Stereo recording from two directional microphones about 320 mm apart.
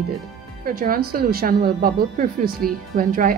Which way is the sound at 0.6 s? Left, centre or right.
Right.